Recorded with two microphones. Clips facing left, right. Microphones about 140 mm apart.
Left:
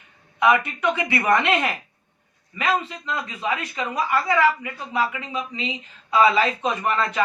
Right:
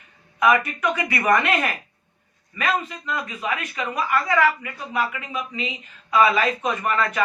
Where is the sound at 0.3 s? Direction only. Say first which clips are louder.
Even; 25° left (ahead or behind).